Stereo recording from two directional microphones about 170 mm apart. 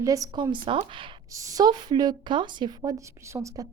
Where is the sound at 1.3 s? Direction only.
20° right (ahead or behind).